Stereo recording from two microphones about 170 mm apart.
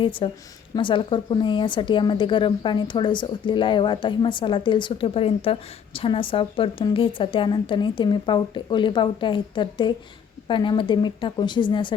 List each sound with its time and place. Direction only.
0.0 s speech: 30° left (ahead or behind)